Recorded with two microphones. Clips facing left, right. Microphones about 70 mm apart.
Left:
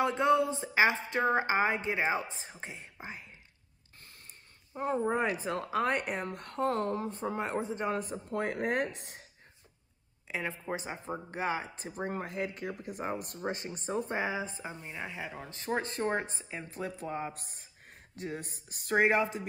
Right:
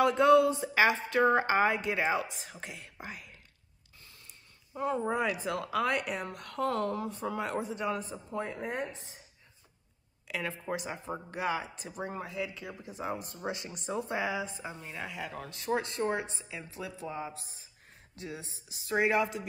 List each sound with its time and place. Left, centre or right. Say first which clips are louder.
0.0 s speech: right 4 dB; left
4.0 s a sound: left 2 dB; left
4.7 s speech: left 1 dB; left
8.3 s speech: left 4 dB; left
10.2 s speech: even; left
13.5 s speech: left 1 dB; left